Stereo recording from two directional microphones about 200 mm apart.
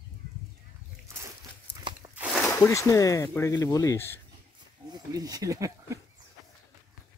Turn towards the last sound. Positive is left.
turn(degrees=-15)  # may be behind; listen again after turning